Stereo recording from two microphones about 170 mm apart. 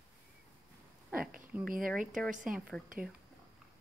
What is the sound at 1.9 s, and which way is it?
Speech, centre (ahead or behind).